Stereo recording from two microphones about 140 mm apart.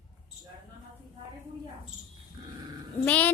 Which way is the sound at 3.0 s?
10° left (ahead or behind).